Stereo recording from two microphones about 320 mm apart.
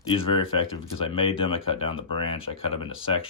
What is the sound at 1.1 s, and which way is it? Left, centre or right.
Speech, centre.